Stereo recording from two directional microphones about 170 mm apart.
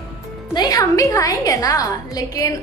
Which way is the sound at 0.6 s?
20° left (ahead or behind).